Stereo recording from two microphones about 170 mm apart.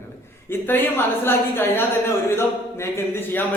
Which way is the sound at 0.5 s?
15° left (ahead or behind).